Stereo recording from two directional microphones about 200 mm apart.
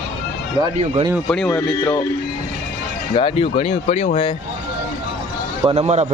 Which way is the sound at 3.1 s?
25° left (ahead or behind).